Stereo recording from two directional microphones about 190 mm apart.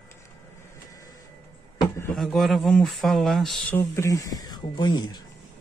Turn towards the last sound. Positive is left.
turn(degrees=20)  # may be behind; listen again after turning